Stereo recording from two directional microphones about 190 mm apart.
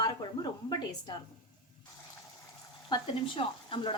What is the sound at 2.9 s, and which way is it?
A woman's voice, 25° left (ahead or behind).